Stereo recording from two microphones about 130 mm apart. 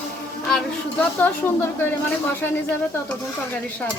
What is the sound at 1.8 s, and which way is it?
A woman's voice, 15° left (ahead or behind).